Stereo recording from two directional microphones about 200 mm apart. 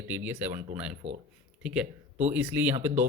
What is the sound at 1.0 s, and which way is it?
Speech, 30° right (ahead or behind).